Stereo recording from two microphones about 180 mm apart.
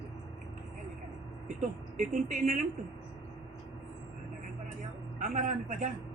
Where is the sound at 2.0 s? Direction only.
45° right (ahead or behind).